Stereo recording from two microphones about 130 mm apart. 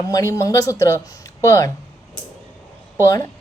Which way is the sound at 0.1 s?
25° left (ahead or behind).